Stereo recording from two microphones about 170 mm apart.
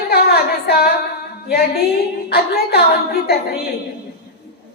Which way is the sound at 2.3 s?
65° left (ahead or behind).